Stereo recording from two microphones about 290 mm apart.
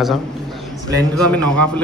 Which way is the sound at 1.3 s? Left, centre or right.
Centre.